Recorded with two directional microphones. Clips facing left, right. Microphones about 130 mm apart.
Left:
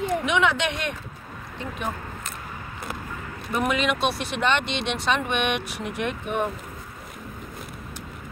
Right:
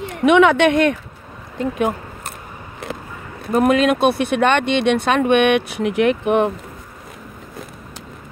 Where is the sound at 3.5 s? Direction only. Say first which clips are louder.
Right 9 dB; 50° right (ahead or behind); by 6.5 s 85° right.